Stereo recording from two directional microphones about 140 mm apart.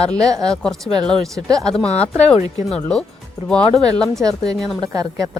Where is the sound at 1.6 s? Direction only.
5° left (ahead or behind).